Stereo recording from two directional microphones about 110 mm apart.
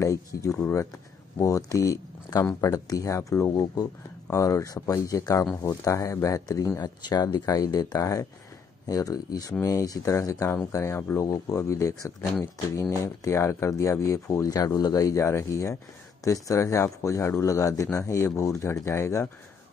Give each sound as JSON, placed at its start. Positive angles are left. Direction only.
{"t": 0.0, "sound": "speech", "side_deg": 30}